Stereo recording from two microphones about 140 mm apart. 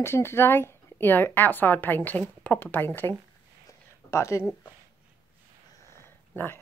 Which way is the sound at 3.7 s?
20° left (ahead or behind).